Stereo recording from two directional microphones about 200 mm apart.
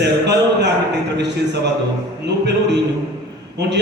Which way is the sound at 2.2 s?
60° right (ahead or behind).